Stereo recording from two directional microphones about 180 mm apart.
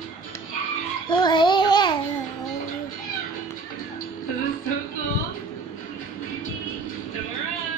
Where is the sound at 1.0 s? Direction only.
25° left (ahead or behind).